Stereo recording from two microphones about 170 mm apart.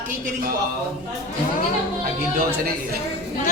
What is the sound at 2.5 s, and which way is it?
Speech, 65° right (ahead or behind).